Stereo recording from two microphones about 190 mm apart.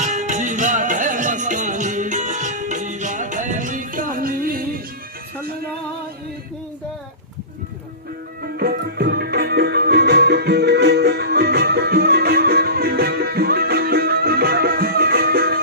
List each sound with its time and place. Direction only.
0.0 s music: 40° right (ahead or behind)
8.5 s music: 55° right (ahead or behind)